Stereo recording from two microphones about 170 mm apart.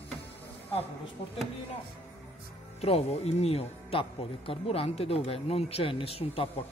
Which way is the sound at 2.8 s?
35° left (ahead or behind).